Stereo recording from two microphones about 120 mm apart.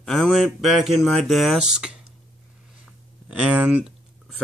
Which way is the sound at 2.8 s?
10° right (ahead or behind).